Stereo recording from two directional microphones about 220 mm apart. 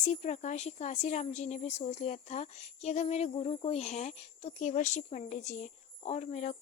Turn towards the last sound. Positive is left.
turn(degrees=30)  # may be behind; listen again after turning